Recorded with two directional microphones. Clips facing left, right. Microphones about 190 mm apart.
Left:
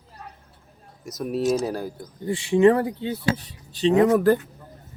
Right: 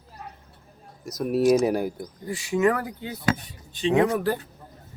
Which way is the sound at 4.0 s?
45° left (ahead or behind).